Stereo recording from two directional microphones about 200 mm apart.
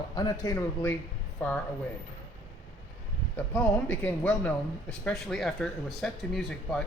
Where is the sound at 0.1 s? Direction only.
20° left (ahead or behind).